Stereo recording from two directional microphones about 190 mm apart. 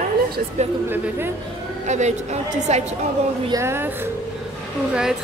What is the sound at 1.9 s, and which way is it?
Speech, 40° right (ahead or behind).